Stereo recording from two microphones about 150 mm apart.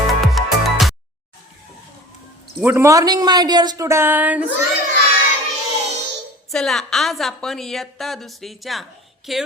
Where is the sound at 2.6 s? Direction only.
15° right (ahead or behind).